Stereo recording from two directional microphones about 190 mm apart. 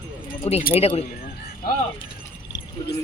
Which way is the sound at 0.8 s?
30° left (ahead or behind).